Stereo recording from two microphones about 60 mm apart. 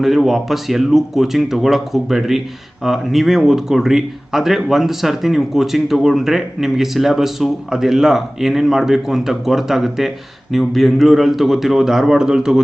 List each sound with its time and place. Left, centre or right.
0.0 s speech: centre